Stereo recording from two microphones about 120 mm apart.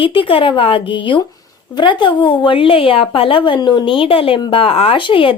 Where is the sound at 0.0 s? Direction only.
45° left (ahead or behind).